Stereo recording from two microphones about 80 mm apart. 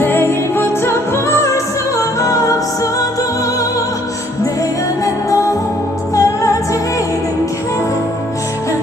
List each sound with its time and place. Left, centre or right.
0.0 s music: left
5.3 s music: left